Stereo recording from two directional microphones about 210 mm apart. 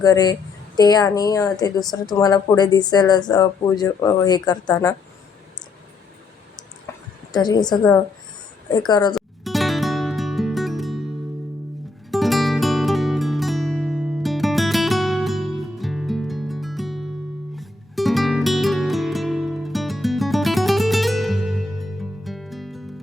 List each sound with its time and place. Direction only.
0.0 s a woman's voice: 20° left (ahead or behind)
7.3 s a woman's voice: 20° left (ahead or behind)
9.1 s music: centre (ahead or behind)
12.1 s music: centre (ahead or behind)